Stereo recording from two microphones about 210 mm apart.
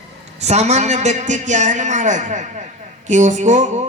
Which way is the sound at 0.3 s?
30° right (ahead or behind).